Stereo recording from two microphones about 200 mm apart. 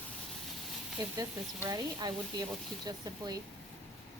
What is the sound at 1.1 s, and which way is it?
Speech, 15° right (ahead or behind).